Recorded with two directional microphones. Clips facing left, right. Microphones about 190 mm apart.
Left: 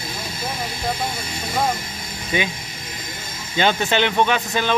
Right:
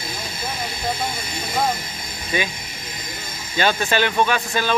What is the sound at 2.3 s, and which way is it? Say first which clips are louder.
Speech: left 1 dB; 20° left (ahead or behind).